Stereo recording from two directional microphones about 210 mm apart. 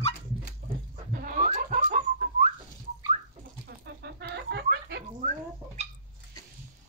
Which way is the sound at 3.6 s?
50° right (ahead or behind).